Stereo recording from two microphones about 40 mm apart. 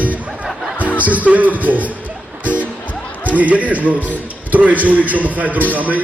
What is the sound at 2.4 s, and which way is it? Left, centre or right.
Music, right.